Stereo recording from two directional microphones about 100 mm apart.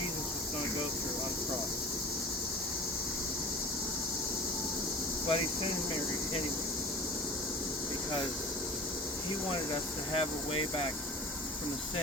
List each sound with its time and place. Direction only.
5.3 s speech: 65° left (ahead or behind)
10.1 s speech: 65° left (ahead or behind)